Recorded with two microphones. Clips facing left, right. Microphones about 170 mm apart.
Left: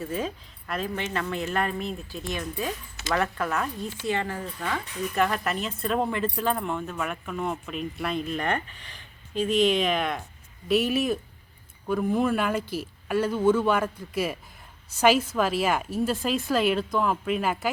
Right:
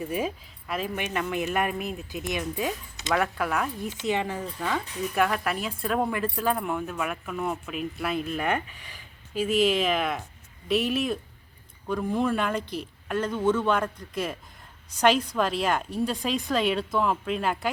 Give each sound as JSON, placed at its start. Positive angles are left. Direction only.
{"t": 0.0, "sound": "speech", "side_deg": -10}
{"t": 3.1, "sound": "speech", "side_deg": -5}
{"t": 5.1, "sound": "speech", "side_deg": -5}